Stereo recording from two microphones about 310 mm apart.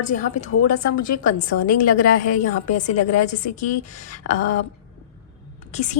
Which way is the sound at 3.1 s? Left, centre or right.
Left.